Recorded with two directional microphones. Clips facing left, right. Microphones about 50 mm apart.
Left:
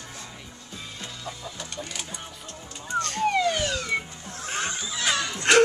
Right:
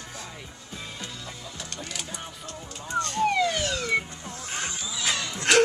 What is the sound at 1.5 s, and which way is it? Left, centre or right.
Music, centre.